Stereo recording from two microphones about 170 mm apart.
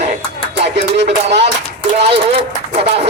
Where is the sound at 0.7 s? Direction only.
90° right.